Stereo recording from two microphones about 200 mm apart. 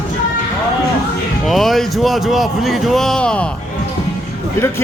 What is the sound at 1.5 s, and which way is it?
A man's voice, centre (ahead or behind).